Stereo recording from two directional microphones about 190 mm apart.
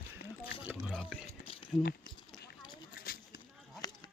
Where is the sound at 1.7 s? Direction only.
25° left (ahead or behind).